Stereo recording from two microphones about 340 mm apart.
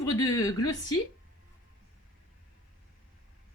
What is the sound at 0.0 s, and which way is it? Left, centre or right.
Speech, centre.